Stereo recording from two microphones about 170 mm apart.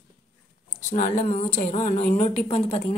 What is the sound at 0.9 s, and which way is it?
A woman's voice, 45° left (ahead or behind).